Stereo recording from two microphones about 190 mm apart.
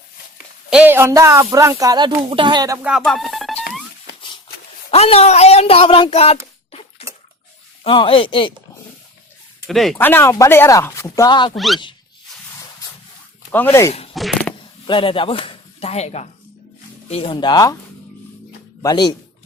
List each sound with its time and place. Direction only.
0.7 s speech: 10° right (ahead or behind)
4.9 s speech: 30° left (ahead or behind)
7.9 s speech: 25° left (ahead or behind)
9.6 s speech: centre (ahead or behind); by 11.5 s 25° left (ahead or behind)
11.5 s speech: centre (ahead or behind)
13.5 s speech: 10° left (ahead or behind)
14.1 s a sound: centre (ahead or behind)
14.8 s speech: 25° left (ahead or behind)
18.8 s speech: 20° left (ahead or behind)